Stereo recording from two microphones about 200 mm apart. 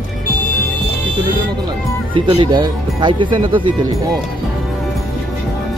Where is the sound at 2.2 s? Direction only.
25° right (ahead or behind).